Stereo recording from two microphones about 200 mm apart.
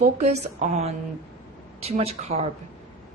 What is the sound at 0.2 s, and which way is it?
Speech, 35° right (ahead or behind).